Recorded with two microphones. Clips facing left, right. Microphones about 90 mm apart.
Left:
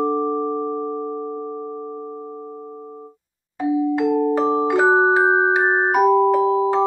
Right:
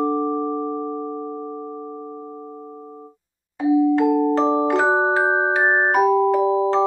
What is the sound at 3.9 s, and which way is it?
Music, 5° right (ahead or behind).